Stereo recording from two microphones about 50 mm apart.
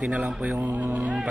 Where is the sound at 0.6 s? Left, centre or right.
Right.